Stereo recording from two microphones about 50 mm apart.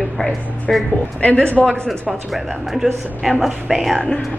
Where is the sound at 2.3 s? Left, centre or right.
Centre.